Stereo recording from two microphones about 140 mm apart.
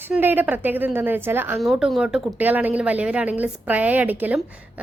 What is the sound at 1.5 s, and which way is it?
Speech, centre (ahead or behind).